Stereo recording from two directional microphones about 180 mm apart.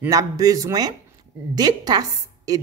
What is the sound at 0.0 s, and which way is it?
A woman's voice, 20° right (ahead or behind).